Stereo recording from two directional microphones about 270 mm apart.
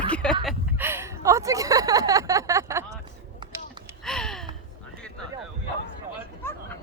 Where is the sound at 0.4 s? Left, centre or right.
Centre.